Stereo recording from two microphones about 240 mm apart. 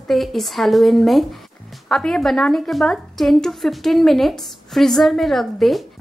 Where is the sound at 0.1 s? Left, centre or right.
Centre.